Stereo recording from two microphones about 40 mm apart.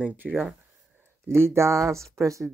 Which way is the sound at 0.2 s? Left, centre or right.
Right.